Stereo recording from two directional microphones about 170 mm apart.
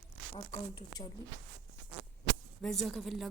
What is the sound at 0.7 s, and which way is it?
Speech, 25° left (ahead or behind).